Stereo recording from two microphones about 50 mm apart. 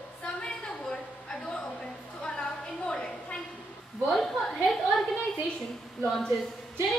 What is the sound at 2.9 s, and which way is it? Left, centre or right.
A woman's voice, centre.